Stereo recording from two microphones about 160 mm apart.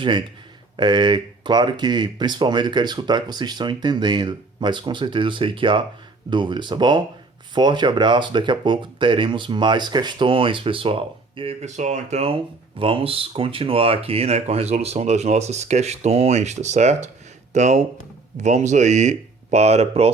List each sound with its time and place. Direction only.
0.8 s speech: 30° right (ahead or behind)